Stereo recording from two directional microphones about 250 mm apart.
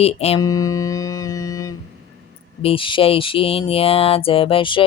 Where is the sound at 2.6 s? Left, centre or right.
Left.